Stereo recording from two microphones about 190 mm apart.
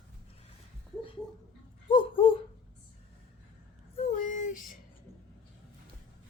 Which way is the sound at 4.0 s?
40° left (ahead or behind).